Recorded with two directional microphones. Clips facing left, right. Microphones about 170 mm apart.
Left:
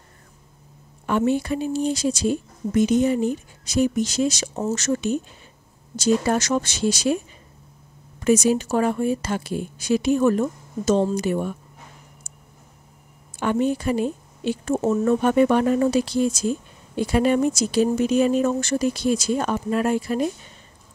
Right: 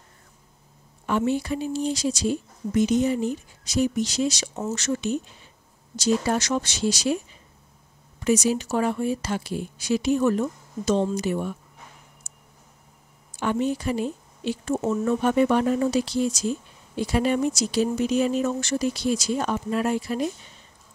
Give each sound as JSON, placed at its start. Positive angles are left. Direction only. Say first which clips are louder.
{"t": 1.0, "sound": "speech", "louder": "left 3 dB", "side_deg": 55}
{"t": 8.2, "sound": "speech", "louder": "left 4 dB", "side_deg": 50}
{"t": 13.4, "sound": "speech", "louder": "left 3 dB", "side_deg": 55}